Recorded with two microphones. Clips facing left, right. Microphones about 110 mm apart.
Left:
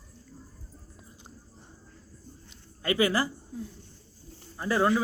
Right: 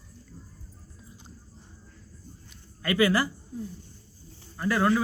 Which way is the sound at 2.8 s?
20° left (ahead or behind).